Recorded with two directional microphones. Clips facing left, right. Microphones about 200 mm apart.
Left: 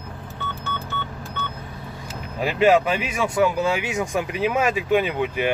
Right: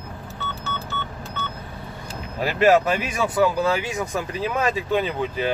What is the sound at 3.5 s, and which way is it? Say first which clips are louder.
Speech: even; 15° left (ahead or behind).